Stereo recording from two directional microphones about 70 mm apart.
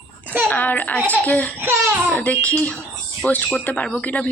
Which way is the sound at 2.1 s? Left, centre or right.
Centre.